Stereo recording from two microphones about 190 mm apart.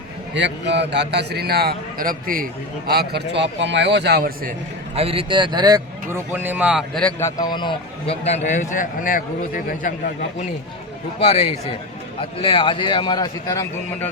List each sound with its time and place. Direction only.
0.3 s a man's voice: 65° right (ahead or behind)
4.9 s a man's voice: 30° right (ahead or behind); by 7.1 s centre (ahead or behind)
7.2 s a man's voice: 15° left (ahead or behind); by 9.9 s 45° left (ahead or behind)
11.2 s a man's voice: 35° left (ahead or behind); by 14.1 s 15° left (ahead or behind)